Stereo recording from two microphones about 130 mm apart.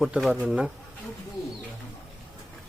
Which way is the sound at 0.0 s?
Centre (ahead or behind).